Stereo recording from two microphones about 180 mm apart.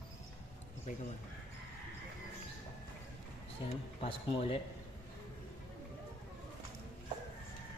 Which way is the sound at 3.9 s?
35° left (ahead or behind).